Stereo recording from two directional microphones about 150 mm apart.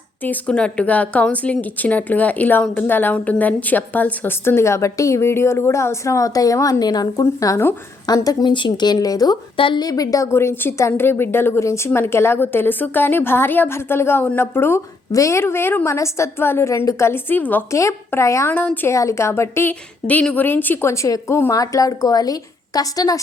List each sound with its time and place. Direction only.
0.2 s a woman's voice: 10° left (ahead or behind)